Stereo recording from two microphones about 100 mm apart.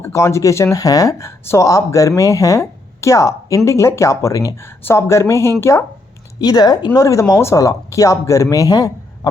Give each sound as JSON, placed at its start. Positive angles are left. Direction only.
{"t": 0.0, "sound": "speech", "side_deg": 30}
{"t": 6.4, "sound": "speech", "side_deg": 40}